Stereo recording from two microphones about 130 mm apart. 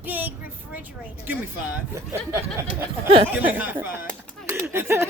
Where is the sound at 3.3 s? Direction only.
15° right (ahead or behind).